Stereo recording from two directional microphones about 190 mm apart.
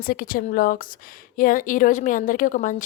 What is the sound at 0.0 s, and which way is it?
A woman's voice, 50° left (ahead or behind).